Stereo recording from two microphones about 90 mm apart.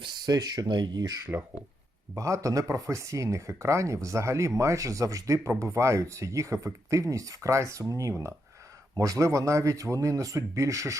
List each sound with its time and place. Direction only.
0.0 s speech: 55° right (ahead or behind)
2.1 s speech: 35° right (ahead or behind)